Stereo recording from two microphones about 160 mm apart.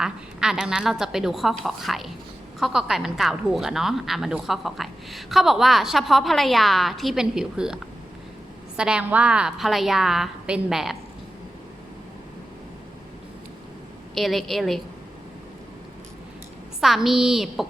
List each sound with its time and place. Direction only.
0.0 s a woman's voice: 5° right (ahead or behind)
14.2 s a woman's voice: centre (ahead or behind)
16.8 s a woman's voice: centre (ahead or behind)